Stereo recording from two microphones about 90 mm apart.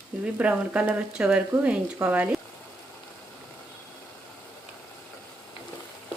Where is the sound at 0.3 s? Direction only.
15° right (ahead or behind).